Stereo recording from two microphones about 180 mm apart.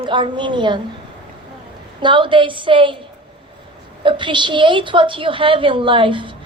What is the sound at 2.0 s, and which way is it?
A woman's voice, 25° right (ahead or behind).